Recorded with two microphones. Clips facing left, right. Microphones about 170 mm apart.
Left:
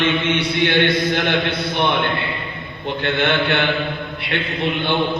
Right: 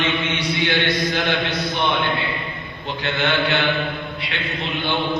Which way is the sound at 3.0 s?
55° left (ahead or behind).